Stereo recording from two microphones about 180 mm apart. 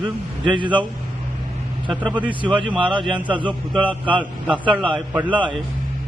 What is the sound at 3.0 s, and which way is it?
A man's voice, 10° right (ahead or behind).